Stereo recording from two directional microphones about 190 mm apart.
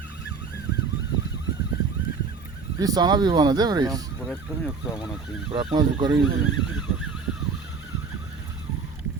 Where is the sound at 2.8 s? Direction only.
20° right (ahead or behind).